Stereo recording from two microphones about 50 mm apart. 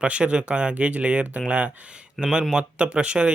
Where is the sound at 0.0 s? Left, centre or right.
Right.